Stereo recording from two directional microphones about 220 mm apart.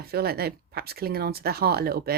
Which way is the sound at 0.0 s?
45° right (ahead or behind).